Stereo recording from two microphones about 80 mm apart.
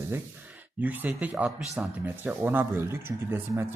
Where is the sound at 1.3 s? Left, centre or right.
Centre.